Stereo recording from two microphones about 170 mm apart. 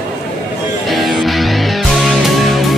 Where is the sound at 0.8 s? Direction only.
Centre (ahead or behind).